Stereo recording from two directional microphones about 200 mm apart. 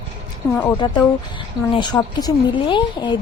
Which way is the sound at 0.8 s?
20° left (ahead or behind).